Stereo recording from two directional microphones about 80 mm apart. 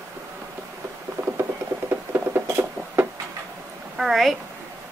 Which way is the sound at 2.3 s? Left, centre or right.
Right.